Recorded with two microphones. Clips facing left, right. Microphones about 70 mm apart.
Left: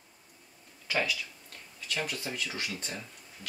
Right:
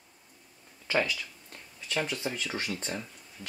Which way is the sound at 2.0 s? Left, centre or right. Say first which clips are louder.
Right 4 dB; right.